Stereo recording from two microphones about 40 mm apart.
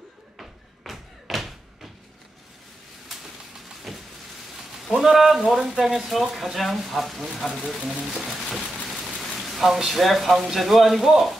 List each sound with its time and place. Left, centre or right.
0.4 s thump: centre
3.9 s vehicle: centre
4.8 s speech: centre
7.6 s speech: right
8.0 s speech: centre
9.0 s rain on surface: centre
9.8 s speech: centre